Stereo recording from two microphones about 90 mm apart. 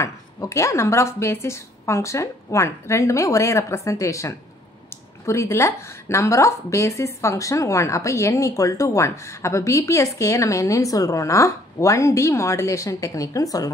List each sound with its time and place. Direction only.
0.0 s a woman's voice: 35° left (ahead or behind)